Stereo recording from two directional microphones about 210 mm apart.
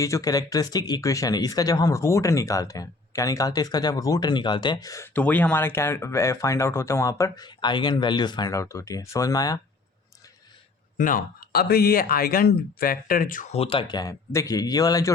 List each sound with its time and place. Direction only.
0.0 s speech: 15° left (ahead or behind)
10.9 s speech: 40° left (ahead or behind); by 15.1 s 15° left (ahead or behind)